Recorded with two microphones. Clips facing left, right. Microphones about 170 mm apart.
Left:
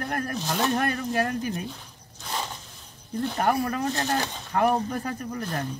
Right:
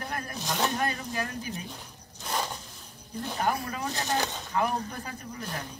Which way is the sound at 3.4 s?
50° left (ahead or behind).